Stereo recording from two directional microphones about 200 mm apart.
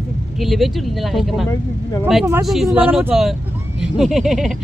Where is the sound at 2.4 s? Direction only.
Centre (ahead or behind).